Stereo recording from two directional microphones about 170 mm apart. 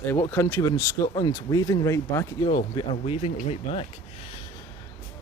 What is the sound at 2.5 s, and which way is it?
Speech, 35° left (ahead or behind).